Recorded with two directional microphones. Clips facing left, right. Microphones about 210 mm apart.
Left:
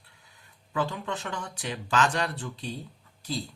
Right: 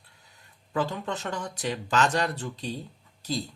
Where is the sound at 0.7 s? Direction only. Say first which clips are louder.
Right 1 dB; 40° right (ahead or behind).